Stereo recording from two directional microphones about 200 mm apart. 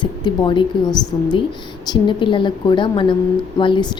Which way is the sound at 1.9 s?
25° left (ahead or behind).